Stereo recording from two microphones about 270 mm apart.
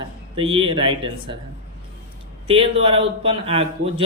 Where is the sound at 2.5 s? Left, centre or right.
Centre.